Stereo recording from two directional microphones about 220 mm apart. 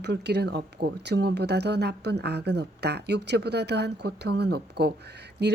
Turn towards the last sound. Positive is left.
turn(degrees=-50)  # may be behind; listen again after turning